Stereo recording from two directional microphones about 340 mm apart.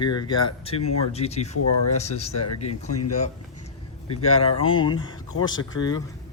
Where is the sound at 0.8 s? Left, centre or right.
Left.